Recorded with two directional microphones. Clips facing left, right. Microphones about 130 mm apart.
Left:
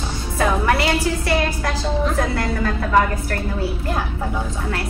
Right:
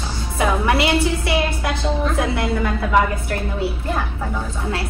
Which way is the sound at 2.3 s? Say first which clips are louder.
Right 1 dB; 15° right (ahead or behind).